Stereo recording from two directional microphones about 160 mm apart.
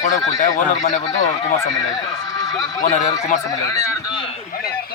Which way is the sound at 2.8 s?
50° left (ahead or behind).